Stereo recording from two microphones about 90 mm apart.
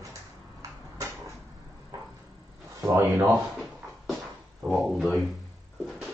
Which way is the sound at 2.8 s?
35° right (ahead or behind).